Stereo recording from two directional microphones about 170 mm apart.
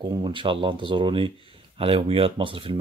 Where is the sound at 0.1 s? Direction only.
30° right (ahead or behind).